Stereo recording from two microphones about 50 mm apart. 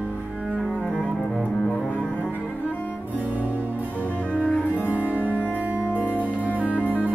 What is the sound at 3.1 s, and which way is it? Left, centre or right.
Music, right.